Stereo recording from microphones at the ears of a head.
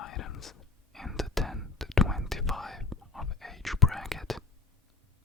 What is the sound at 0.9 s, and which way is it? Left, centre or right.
Whispering, centre.